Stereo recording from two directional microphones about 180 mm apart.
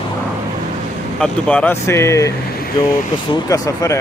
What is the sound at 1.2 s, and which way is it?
Speech, 5° left (ahead or behind).